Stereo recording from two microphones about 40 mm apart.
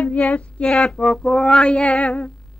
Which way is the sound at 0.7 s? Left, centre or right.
Centre.